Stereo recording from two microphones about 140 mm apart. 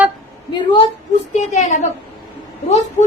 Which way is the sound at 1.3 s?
55° left (ahead or behind).